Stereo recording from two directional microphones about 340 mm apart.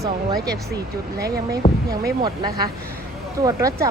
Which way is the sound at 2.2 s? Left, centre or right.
Centre.